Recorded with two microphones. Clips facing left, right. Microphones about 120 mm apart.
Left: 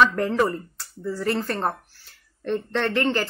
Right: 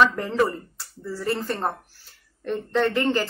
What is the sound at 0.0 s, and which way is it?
A woman's voice, 10° right (ahead or behind).